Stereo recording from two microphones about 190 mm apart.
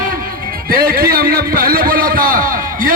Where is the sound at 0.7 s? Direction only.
50° right (ahead or behind).